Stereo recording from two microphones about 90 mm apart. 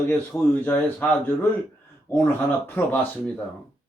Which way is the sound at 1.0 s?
15° left (ahead or behind).